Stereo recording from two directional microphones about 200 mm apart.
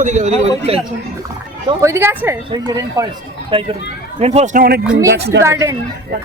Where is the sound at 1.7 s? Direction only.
15° right (ahead or behind).